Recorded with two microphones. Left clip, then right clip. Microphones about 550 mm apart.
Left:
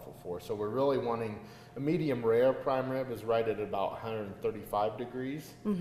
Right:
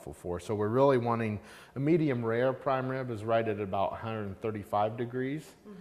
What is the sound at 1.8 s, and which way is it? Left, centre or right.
A man's voice, right.